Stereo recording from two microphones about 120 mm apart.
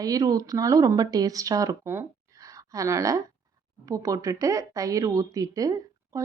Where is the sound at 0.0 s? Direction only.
30° right (ahead or behind).